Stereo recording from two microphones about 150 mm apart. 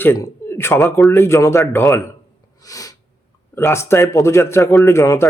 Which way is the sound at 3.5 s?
15° left (ahead or behind).